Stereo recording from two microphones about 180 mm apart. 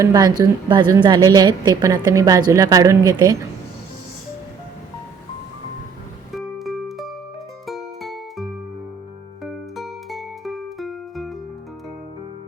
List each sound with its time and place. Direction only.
0.0 s a woman's voice: 20° right (ahead or behind)
6.3 s music: centre (ahead or behind)